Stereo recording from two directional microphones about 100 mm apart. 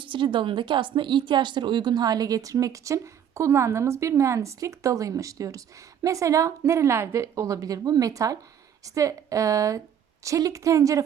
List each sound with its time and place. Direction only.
0.0 s speech: 55° right (ahead or behind); by 11.0 s 30° right (ahead or behind)